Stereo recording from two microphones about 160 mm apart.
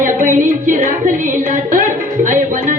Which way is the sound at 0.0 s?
55° right (ahead or behind).